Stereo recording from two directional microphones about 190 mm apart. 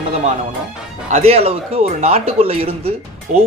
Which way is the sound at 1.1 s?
30° right (ahead or behind).